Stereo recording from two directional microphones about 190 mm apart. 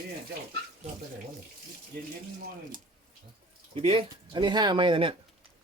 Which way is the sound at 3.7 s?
30° right (ahead or behind).